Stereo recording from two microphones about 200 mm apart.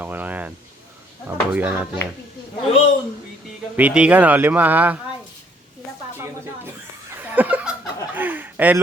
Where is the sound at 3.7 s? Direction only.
5° right (ahead or behind).